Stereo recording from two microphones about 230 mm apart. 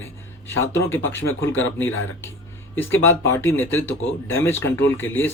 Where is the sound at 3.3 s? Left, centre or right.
Centre.